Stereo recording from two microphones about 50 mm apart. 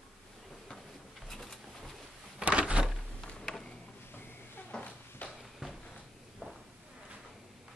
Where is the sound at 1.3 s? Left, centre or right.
Centre.